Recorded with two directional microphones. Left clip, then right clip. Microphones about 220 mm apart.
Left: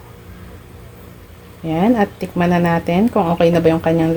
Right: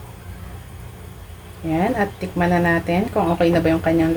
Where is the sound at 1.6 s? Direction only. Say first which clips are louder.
Left 4 dB; 40° left (ahead or behind).